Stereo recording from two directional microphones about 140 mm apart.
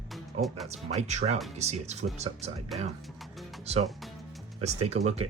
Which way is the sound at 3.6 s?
50° right (ahead or behind).